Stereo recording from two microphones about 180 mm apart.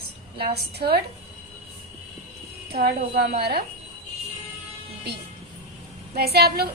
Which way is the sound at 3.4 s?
60° right (ahead or behind).